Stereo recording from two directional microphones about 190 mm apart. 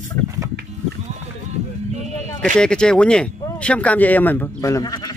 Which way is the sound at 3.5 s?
5° left (ahead or behind).